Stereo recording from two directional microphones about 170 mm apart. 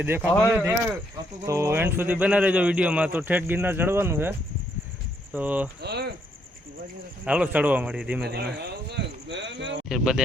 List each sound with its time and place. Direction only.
0.0 s a man's voice: 10° right (ahead or behind)
5.8 s speech: 75° right (ahead or behind)
7.3 s a man's voice: 10° right (ahead or behind)
8.3 s speech: 70° right (ahead or behind); by 9.8 s 90° right
9.9 s speech: 5° right (ahead or behind)